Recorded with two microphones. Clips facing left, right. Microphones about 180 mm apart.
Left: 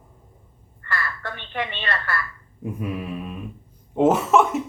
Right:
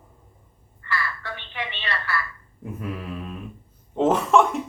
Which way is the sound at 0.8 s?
50° left (ahead or behind).